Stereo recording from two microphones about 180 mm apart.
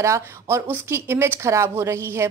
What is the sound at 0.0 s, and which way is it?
Speech, 15° right (ahead or behind).